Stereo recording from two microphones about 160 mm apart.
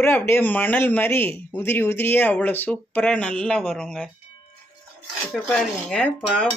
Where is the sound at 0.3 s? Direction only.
10° left (ahead or behind).